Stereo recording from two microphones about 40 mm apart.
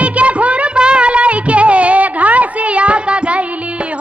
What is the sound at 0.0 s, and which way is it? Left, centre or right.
Music, right.